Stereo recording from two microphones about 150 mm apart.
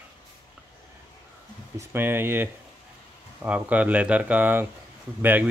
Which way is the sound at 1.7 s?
15° right (ahead or behind).